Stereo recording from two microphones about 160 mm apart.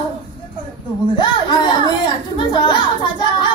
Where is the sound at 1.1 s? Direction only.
30° left (ahead or behind).